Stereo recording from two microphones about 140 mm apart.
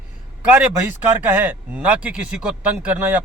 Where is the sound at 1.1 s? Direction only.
15° right (ahead or behind).